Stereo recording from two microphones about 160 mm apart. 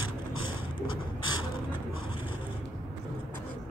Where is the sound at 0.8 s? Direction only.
30° left (ahead or behind).